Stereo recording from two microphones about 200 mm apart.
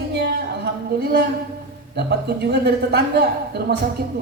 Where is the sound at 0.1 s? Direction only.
55° right (ahead or behind).